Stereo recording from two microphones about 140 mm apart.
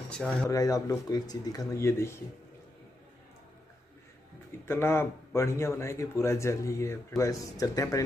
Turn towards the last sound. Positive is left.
turn(degrees=25)  # may be behind; listen again after turning